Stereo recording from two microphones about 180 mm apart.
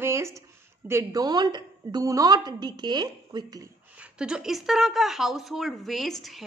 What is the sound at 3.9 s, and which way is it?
A woman's voice, 5° right (ahead or behind).